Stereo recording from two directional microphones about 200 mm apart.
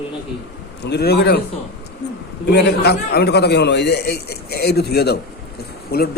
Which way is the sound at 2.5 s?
55° left (ahead or behind).